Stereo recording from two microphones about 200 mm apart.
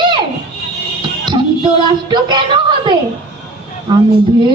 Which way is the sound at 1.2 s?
25° right (ahead or behind).